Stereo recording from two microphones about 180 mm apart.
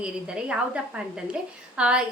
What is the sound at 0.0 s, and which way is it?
A woman's voice, 5° right (ahead or behind).